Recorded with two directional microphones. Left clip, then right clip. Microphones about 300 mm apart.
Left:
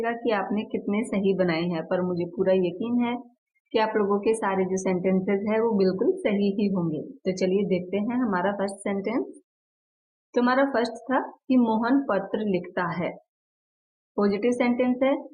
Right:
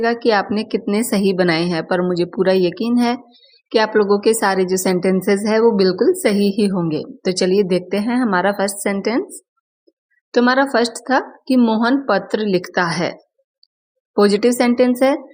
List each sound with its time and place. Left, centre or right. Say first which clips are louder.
0.0 s a woman's voice: right 10 dB; right
10.3 s a woman's voice: right 8 dB; right
14.2 s a woman's voice: right 10 dB; right